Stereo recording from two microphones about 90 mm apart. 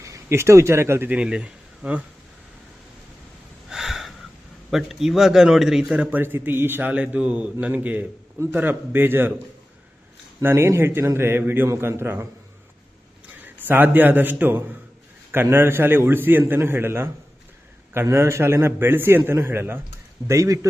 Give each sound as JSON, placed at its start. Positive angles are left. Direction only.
{"t": 0.0, "sound": "speech", "side_deg": -30}
{"t": 1.1, "sound": "speech", "side_deg": -10}
{"t": 3.7, "sound": "a sound", "side_deg": -5}
{"t": 4.7, "sound": "a man's voice", "side_deg": -5}
{"t": 6.9, "sound": "a man's voice", "side_deg": -15}
{"t": 10.4, "sound": "a man's voice", "side_deg": -30}
{"t": 13.4, "sound": "a man's voice", "side_deg": -20}
{"t": 20.2, "sound": "a man's voice", "side_deg": -35}